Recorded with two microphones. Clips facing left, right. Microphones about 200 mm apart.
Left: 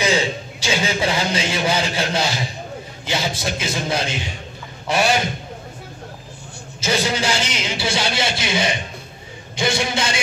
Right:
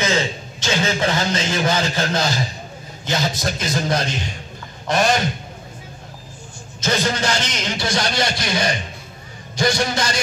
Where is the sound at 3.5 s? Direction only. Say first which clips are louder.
Right 1 dB; 5° left (ahead or behind).